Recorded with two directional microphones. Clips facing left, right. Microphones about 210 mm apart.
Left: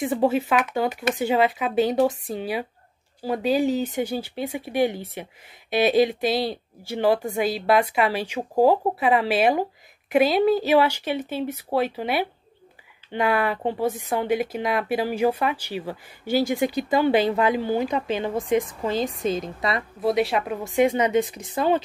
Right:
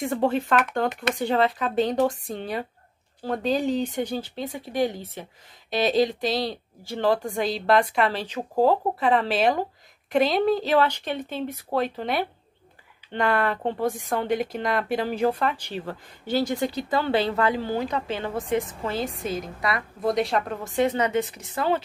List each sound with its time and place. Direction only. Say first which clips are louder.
0.0 s a woman's voice: left 2 dB; 5° left (ahead or behind); by 19.8 s 25° left (ahead or behind)
20.0 s speech: left 2 dB; 5° left (ahead or behind)